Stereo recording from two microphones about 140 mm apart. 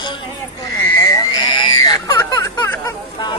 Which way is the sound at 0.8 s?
20° left (ahead or behind).